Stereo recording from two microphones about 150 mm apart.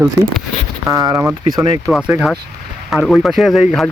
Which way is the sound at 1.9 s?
Centre (ahead or behind).